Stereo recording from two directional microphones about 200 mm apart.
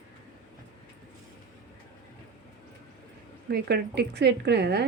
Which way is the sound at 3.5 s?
55° right (ahead or behind).